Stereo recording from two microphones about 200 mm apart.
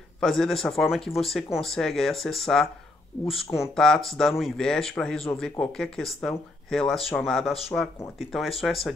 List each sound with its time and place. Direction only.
0.2 s speech: centre (ahead or behind)
3.7 s speech: 5° left (ahead or behind)